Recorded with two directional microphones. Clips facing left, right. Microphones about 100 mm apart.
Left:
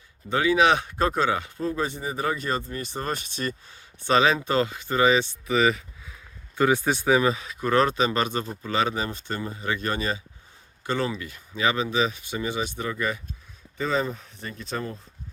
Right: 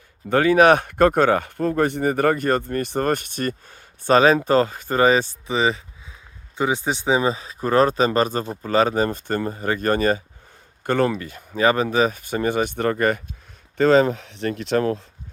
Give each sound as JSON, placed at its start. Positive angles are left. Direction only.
{"t": 0.3, "sound": "speech", "side_deg": -50}
{"t": 5.5, "sound": "speech", "side_deg": -30}
{"t": 13.7, "sound": "speech", "side_deg": -80}